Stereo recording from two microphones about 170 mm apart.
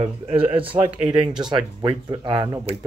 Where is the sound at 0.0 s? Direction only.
35° right (ahead or behind).